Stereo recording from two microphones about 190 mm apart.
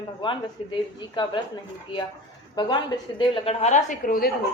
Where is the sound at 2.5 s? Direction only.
25° left (ahead or behind).